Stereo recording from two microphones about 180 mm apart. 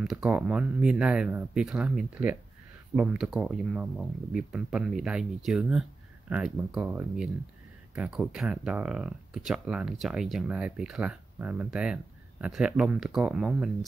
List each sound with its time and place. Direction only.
0.0 s speech: centre (ahead or behind)